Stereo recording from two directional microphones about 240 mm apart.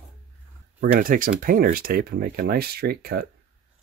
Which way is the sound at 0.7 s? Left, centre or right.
Right.